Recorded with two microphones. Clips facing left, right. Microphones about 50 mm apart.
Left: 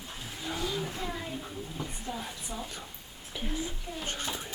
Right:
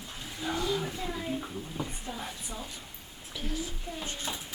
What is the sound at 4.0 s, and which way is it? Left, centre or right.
Speech, left.